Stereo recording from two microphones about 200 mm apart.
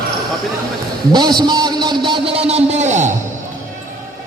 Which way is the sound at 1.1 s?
20° right (ahead or behind).